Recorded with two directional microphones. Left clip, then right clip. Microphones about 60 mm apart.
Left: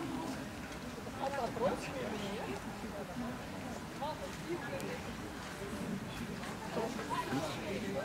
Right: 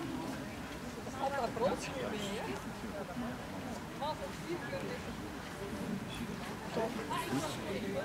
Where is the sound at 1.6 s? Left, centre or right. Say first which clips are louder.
Right 1 dB; right.